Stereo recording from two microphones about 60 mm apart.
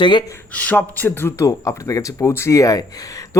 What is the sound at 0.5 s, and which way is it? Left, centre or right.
Speech, left.